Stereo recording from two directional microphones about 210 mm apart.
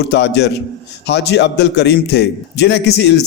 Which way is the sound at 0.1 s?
55° left (ahead or behind).